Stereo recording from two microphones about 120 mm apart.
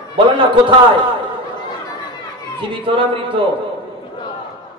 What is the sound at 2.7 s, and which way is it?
Speech, 45° right (ahead or behind).